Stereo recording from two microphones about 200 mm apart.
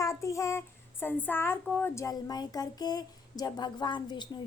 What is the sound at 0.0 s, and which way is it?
A child's voice, 15° left (ahead or behind).